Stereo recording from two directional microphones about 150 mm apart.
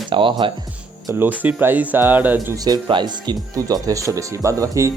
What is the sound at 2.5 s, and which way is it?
Speech, 25° right (ahead or behind).